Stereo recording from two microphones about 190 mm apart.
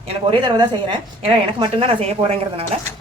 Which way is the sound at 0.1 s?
25° right (ahead or behind).